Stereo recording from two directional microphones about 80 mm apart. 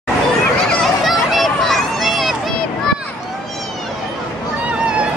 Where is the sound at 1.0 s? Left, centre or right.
Centre.